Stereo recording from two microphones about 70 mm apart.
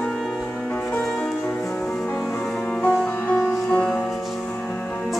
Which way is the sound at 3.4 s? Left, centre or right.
Centre.